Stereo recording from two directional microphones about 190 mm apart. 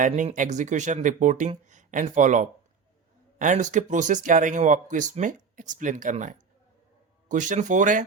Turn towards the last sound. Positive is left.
turn(degrees=-40)  # may be behind; listen again after turning